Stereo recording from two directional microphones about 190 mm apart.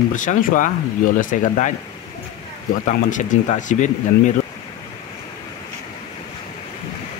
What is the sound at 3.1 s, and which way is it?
Speech, 40° left (ahead or behind).